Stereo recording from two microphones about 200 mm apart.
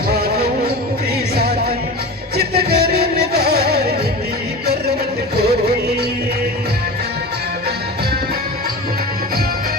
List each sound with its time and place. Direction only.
0.1 s music: 50° right (ahead or behind)
5.4 s music: 50° right (ahead or behind)